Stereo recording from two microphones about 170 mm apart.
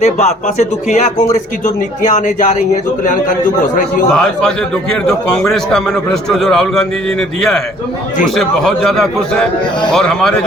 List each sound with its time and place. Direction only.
0.0 s speech: 40° left (ahead or behind)
4.1 s a man's voice: 5° left (ahead or behind)